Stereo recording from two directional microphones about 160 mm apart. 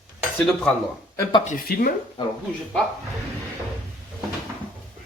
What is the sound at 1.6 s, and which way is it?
Speech, 70° left (ahead or behind).